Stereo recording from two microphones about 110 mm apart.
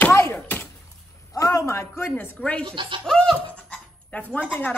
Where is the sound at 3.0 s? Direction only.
5° left (ahead or behind).